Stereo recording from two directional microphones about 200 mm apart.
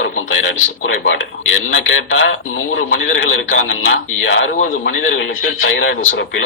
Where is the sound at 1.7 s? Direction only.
75° left (ahead or behind).